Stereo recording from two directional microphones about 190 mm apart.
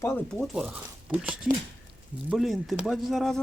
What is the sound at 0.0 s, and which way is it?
Speech, 10° left (ahead or behind).